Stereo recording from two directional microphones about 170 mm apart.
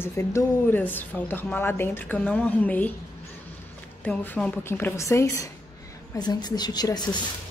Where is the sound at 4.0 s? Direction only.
10° left (ahead or behind).